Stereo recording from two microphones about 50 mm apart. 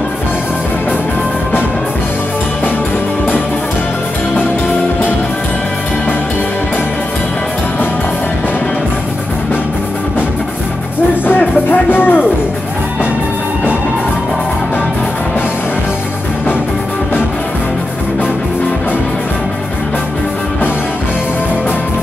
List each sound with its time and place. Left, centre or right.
11.2 s music: left